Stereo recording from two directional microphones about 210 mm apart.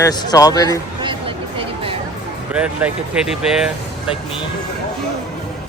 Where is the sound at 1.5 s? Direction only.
25° right (ahead or behind).